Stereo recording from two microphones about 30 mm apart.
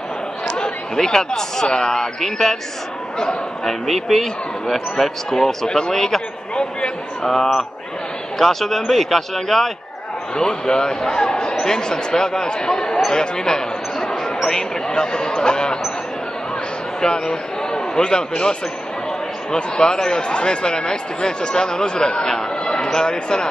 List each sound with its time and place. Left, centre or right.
0.9 s speech: centre
2.1 s speech: centre
3.6 s speech: centre
8.4 s speech: centre
10.3 s speech: left
14.9 s speech: left
17.0 s a man's voice: left